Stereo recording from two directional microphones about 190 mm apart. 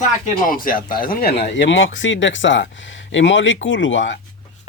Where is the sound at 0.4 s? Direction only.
45° left (ahead or behind); by 4.2 s 75° left (ahead or behind).